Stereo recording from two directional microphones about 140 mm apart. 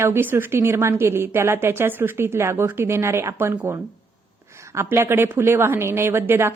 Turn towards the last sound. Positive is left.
turn(degrees=-15)  # may be behind; listen again after turning